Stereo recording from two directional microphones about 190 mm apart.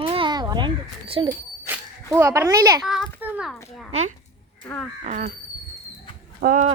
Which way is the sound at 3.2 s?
5° right (ahead or behind).